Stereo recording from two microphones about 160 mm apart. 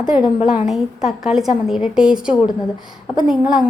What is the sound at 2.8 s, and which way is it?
Speech, 30° left (ahead or behind).